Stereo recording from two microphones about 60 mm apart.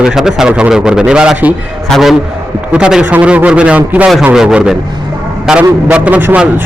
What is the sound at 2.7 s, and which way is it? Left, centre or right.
A man's voice, centre.